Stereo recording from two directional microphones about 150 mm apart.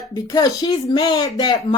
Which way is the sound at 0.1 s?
25° left (ahead or behind).